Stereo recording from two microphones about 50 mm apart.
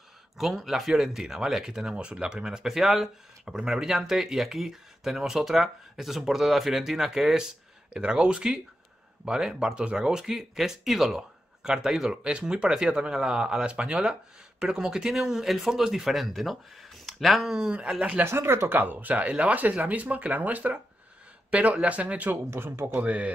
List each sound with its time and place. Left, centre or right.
0.4 s speech: centre
7.9 s speech: centre
17.5 s speech: centre
18.2 s speech: right
18.7 s speech: right
22.5 s speech: right
23.0 s speech: right